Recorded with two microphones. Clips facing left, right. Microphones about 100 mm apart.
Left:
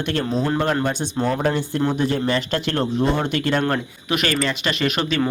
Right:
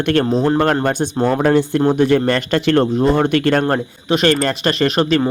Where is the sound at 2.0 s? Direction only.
70° right (ahead or behind).